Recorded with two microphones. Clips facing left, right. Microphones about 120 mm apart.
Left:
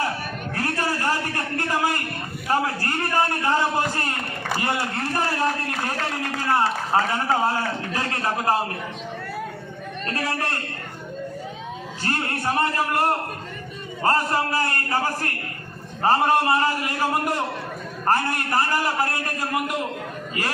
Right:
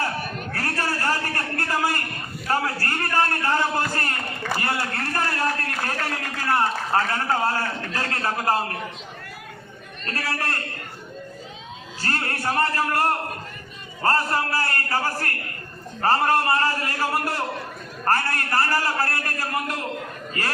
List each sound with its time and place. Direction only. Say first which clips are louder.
0.5 s a sound: left 2 dB; 15° left (ahead or behind)
2.5 s a man's voice: left 1 dB; 15° left (ahead or behind)
10.2 s a man's voice: left 2 dB; 20° left (ahead or behind)
12.0 s a man's voice: left 1 dB; 20° left (ahead or behind)